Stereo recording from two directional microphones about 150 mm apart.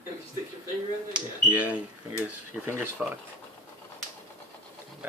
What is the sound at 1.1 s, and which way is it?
Speech, 10° right (ahead or behind).